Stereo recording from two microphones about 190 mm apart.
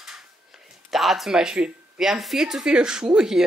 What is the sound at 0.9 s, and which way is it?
Speech, centre (ahead or behind).